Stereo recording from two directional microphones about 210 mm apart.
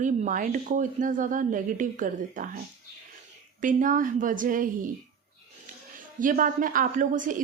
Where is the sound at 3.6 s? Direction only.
40° right (ahead or behind).